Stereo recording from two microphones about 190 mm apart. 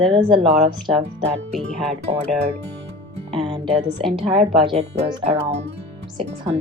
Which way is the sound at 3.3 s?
25° right (ahead or behind).